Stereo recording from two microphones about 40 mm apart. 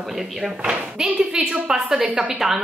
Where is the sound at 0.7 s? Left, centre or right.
Right.